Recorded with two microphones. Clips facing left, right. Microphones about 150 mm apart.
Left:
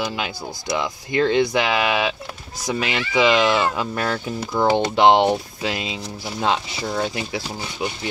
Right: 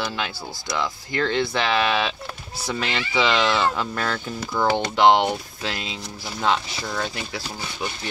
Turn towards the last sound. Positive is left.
turn(degrees=20)  # may be behind; listen again after turning